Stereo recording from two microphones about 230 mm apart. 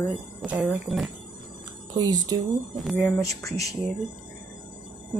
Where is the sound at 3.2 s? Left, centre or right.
Centre.